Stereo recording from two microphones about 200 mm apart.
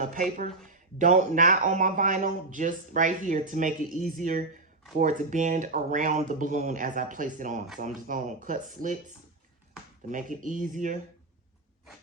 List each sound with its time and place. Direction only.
0.7 s speech: 40° right (ahead or behind)